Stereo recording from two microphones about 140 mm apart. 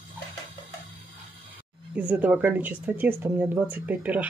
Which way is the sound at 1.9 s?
10° right (ahead or behind).